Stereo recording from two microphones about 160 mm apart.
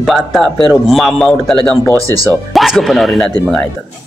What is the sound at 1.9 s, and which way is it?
Speech, 20° right (ahead or behind).